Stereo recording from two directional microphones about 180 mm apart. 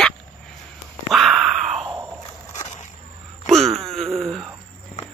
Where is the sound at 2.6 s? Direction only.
40° left (ahead or behind).